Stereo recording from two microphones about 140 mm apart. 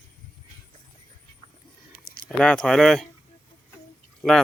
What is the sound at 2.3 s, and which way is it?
Speech, 5° left (ahead or behind).